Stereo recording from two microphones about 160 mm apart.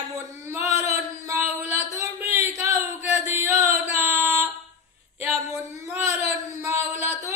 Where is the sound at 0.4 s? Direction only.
15° right (ahead or behind).